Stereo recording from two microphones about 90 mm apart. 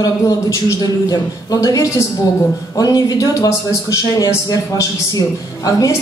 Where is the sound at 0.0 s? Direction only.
40° left (ahead or behind).